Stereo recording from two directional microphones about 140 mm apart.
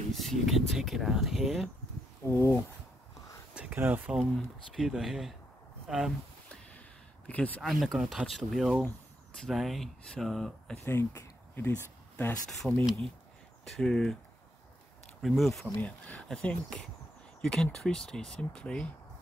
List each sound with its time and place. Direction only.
0.1 s speech: centre (ahead or behind)
2.2 s speech: 20° left (ahead or behind)
3.5 s speech: 15° right (ahead or behind)
7.2 s speech: 10° left (ahead or behind)
10.9 s speech: 15° left (ahead or behind)
12.6 s speech: 5° right (ahead or behind)
15.2 s speech: centre (ahead or behind)